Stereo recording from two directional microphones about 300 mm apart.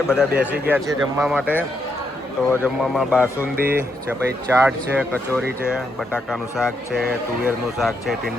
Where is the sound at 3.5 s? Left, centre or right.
Right.